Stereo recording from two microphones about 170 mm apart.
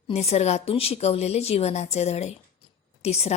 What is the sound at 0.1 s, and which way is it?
A woman's voice, 40° left (ahead or behind).